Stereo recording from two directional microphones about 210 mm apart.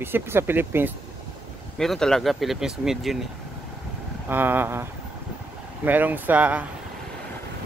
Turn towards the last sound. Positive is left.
turn(degrees=-5)  # may be behind; listen again after turning